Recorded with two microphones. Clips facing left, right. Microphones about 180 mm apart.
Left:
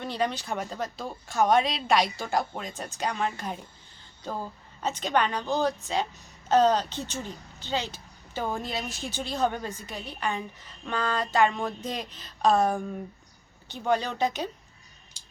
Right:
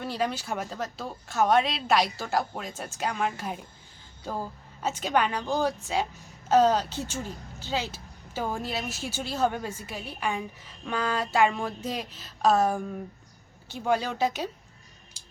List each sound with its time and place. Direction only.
0.0 s a woman's voice: 5° right (ahead or behind)